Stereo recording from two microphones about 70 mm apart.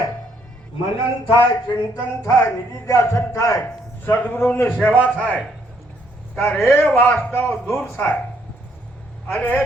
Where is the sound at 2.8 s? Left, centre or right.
Left.